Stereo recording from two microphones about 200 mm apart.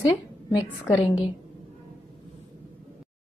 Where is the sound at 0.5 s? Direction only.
15° left (ahead or behind).